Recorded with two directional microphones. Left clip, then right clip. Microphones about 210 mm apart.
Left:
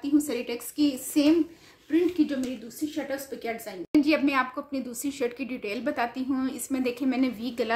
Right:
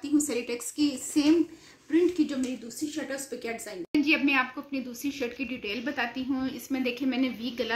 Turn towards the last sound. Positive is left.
turn(degrees=60)  # may be behind; listen again after turning